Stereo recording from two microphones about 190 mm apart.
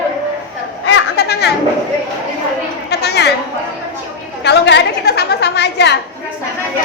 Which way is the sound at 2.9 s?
60° left (ahead or behind).